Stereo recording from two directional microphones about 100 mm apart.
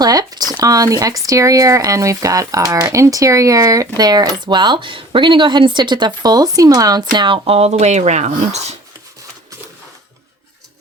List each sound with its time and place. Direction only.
0.0 s speech: 40° right (ahead or behind)
7.4 s speech: 85° right